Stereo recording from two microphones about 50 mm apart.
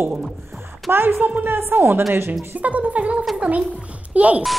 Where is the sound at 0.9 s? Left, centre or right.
Right.